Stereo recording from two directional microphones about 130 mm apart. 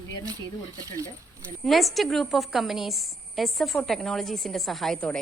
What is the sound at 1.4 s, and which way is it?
A woman's voice, centre (ahead or behind).